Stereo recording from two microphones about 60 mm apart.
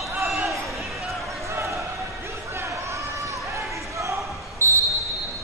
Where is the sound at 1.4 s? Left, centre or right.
Right.